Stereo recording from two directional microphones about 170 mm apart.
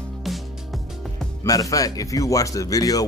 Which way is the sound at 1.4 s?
20° left (ahead or behind).